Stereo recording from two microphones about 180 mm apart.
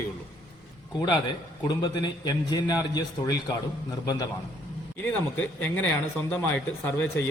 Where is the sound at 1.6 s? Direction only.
25° left (ahead or behind).